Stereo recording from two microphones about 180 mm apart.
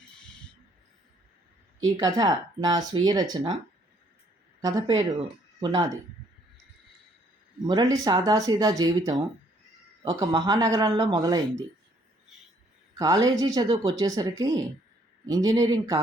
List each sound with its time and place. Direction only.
2.0 s speech: 20° right (ahead or behind)
4.6 s speech: 20° right (ahead or behind)
7.6 s speech: 20° right (ahead or behind)
13.0 s speech: 20° right (ahead or behind)